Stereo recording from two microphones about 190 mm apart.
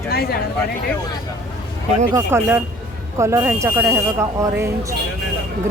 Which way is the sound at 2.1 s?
10° right (ahead or behind).